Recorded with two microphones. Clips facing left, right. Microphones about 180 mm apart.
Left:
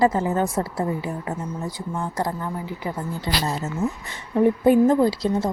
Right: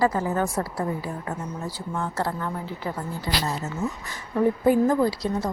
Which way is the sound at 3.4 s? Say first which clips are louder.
Left 3 dB; 25° left (ahead or behind).